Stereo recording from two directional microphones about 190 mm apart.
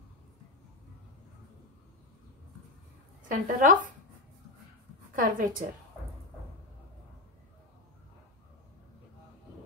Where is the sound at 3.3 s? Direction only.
45° right (ahead or behind).